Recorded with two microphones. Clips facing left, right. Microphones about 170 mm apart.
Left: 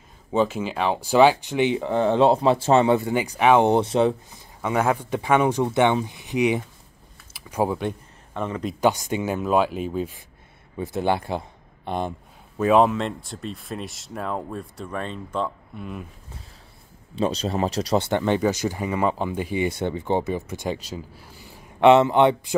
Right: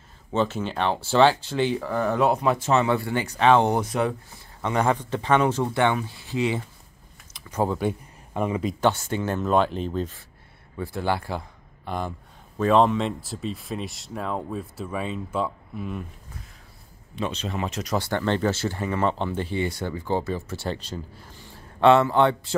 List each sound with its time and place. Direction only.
0.3 s speech: 10° left (ahead or behind); by 4.1 s 25° left (ahead or behind)
4.6 s speech: 5° left (ahead or behind)
8.3 s speech: 10° right (ahead or behind)
8.8 s speech: 15° left (ahead or behind)
10.8 s a man's voice: 20° left (ahead or behind)
12.5 s speech: 5° left (ahead or behind)
17.1 s speech: 35° left (ahead or behind); by 22.6 s 15° left (ahead or behind)